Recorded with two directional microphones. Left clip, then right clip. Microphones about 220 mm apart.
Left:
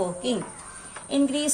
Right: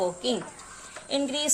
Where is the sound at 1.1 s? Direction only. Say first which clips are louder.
Left 2 dB; 25° right (ahead or behind).